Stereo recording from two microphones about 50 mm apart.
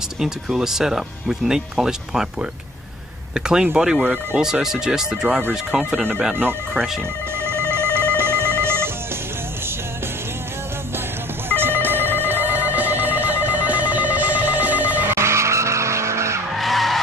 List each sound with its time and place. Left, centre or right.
0.2 s speech: centre
3.3 s speech: centre
7.7 s telephone: right
11.4 s telephone bell ringing: right
12.3 s telephone: right
15.0 s vehicle: right
16.5 s vehicle: centre